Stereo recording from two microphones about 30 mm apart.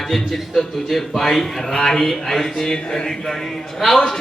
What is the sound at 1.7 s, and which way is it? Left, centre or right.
Speech, left.